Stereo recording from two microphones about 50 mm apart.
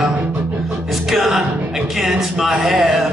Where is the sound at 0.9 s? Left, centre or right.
Centre.